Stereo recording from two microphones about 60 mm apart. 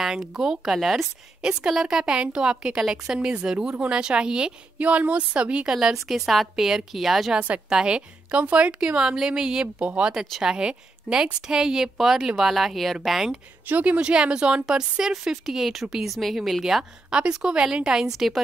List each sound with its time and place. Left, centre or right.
0.0 s a woman's voice: centre
1.4 s a woman's voice: centre
4.7 s a woman's voice: right; by 7.3 s centre
7.3 s a woman's voice: right; by 13.4 s centre
13.7 s a woman's voice: right; by 16.8 s centre
17.1 s a woman's voice: centre